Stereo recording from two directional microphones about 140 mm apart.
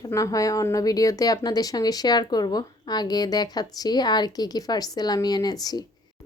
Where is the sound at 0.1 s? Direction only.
25° left (ahead or behind).